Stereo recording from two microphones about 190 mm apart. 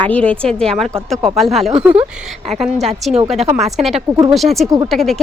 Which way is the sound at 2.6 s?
Centre (ahead or behind).